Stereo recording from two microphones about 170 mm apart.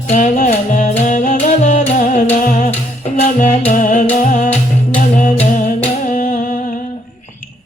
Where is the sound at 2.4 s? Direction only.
55° left (ahead or behind).